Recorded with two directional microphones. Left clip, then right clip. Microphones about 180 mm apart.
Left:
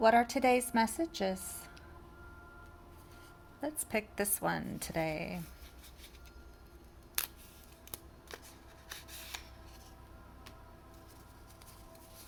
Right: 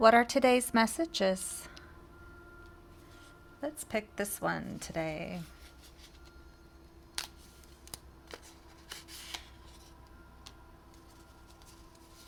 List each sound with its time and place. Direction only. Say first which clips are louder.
0.0 s a woman's voice: right 4 dB; 30° right (ahead or behind)
3.6 s a woman's voice: right 1 dB; 10° right (ahead or behind)
7.2 s camera: even; 5° right (ahead or behind)